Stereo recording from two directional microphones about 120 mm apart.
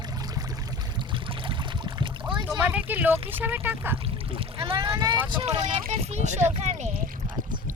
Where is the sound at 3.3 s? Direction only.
15° right (ahead or behind).